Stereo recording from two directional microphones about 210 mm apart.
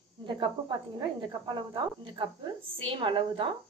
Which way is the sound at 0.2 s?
20° right (ahead or behind).